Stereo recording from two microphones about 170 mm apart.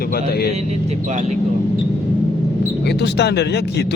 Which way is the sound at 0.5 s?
40° right (ahead or behind).